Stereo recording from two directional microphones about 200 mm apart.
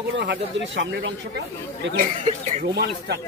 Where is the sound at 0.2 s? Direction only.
65° right (ahead or behind).